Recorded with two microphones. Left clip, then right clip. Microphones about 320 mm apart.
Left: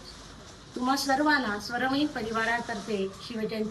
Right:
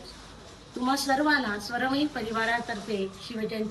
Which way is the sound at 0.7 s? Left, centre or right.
Centre.